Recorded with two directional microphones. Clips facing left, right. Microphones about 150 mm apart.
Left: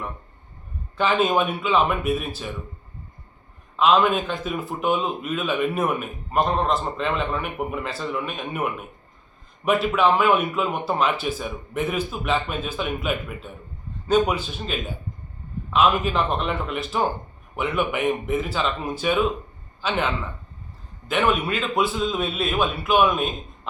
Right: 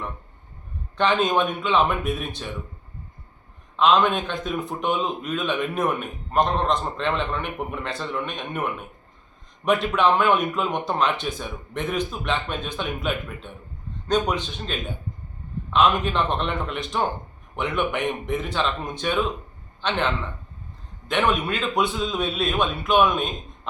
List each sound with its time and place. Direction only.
0.9 s a man's voice: 5° left (ahead or behind)
3.8 s a man's voice: 5° left (ahead or behind)
21.1 s a man's voice: 5° left (ahead or behind)